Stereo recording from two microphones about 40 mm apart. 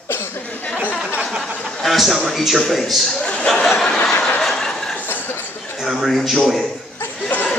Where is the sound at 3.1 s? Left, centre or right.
Left.